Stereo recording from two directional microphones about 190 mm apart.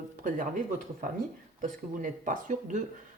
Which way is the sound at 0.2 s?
45° right (ahead or behind).